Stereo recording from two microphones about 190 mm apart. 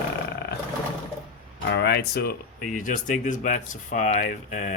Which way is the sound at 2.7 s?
45° left (ahead or behind).